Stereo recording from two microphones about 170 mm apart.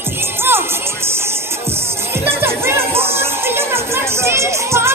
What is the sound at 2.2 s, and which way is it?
Music, 15° right (ahead or behind).